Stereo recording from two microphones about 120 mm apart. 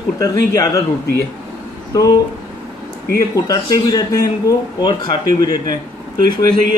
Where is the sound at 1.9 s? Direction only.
30° left (ahead or behind).